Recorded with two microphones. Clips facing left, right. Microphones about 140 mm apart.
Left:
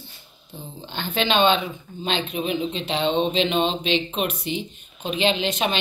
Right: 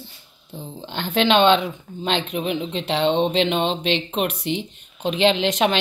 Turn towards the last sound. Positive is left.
turn(degrees=-90)